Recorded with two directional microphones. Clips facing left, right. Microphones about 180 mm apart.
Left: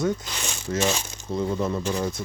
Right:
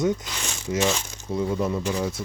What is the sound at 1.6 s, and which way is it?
Speech, 5° right (ahead or behind).